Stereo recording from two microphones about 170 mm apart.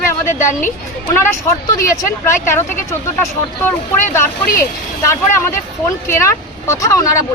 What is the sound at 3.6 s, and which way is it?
Speech, 15° left (ahead or behind).